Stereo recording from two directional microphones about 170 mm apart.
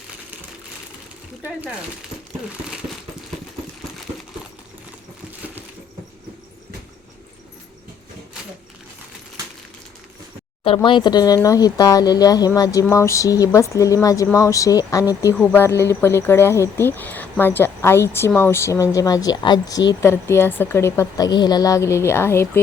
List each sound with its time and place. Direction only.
10.8 s speech: 25° left (ahead or behind)